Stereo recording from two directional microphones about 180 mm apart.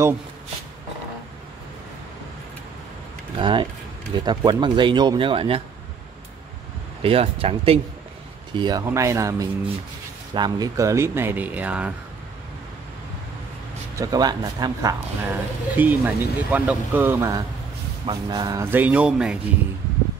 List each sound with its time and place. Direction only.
3.3 s speech: 25° right (ahead or behind)
7.0 s speech: 30° right (ahead or behind)
8.5 s a man's voice: 20° right (ahead or behind)
13.9 s a man's voice: 20° right (ahead or behind); by 19.3 s 5° right (ahead or behind)